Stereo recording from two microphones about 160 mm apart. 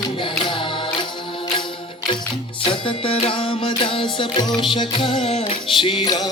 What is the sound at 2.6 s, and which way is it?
Music, 35° left (ahead or behind).